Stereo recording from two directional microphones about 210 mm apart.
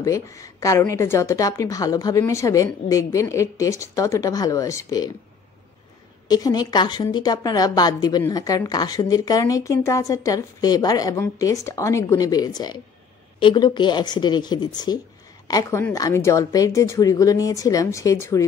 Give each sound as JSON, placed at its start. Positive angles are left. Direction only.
{"t": 0.0, "sound": "a woman's voice", "side_deg": 15}
{"t": 6.2, "sound": "a woman's voice", "side_deg": 20}